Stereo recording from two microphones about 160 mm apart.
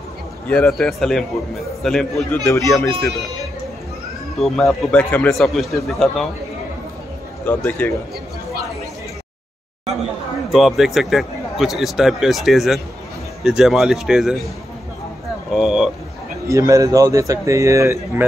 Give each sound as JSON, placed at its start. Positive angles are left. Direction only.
{"t": 0.5, "sound": "speech", "side_deg": 5}
{"t": 2.7, "sound": "a man's voice", "side_deg": 15}
{"t": 4.4, "sound": "speech", "side_deg": 0}
{"t": 7.4, "sound": "a man's voice", "side_deg": 10}
{"t": 10.5, "sound": "speech", "side_deg": 0}
{"t": 15.5, "sound": "speech", "side_deg": -5}
{"t": 16.4, "sound": "speech", "side_deg": -20}